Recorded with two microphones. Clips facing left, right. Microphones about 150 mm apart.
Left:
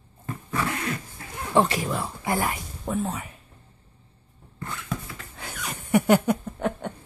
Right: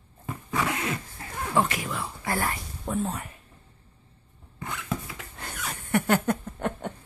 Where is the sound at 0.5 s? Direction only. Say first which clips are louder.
Even; 20° right (ahead or behind).